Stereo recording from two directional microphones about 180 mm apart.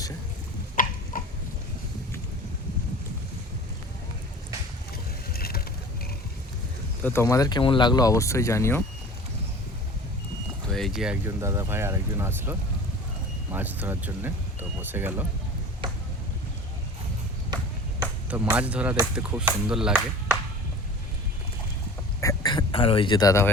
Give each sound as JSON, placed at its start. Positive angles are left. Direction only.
{"t": 0.8, "sound": "a sound", "side_deg": 50}
{"t": 5.3, "sound": "vehicle", "side_deg": 60}
{"t": 7.0, "sound": "speech", "side_deg": 15}
{"t": 10.7, "sound": "vehicle", "side_deg": 0}
{"t": 11.3, "sound": "speech", "side_deg": -15}
{"t": 18.3, "sound": "speech", "side_deg": -10}
{"t": 22.2, "sound": "a sound", "side_deg": 20}